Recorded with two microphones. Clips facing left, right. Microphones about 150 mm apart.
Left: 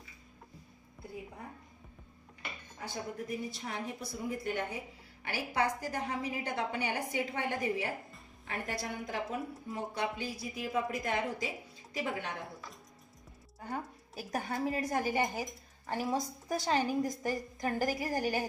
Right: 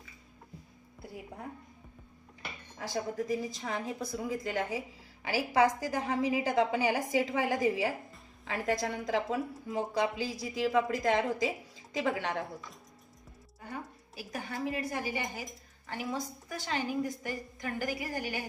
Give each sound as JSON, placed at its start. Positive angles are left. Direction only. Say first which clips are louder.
{"t": 2.7, "sound": "a woman's voice", "louder": "right 6 dB", "side_deg": -90}
{"t": 14.2, "sound": "a woman's voice", "louder": "left 2 dB", "side_deg": 45}